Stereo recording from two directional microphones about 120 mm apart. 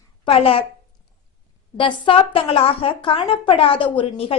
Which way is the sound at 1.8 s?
50° left (ahead or behind).